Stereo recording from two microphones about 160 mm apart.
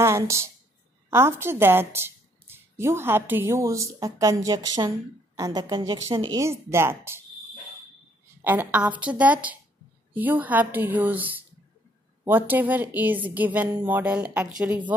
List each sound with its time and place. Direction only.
0.0 s a woman's voice: 15° right (ahead or behind)
6.3 s a woman's voice: 15° right (ahead or behind)
8.5 s a woman's voice: 10° right (ahead or behind)